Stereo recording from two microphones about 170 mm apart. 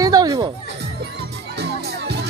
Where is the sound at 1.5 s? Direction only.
80° right.